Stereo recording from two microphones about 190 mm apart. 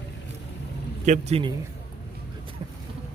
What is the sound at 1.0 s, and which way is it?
Speech, 35° right (ahead or behind).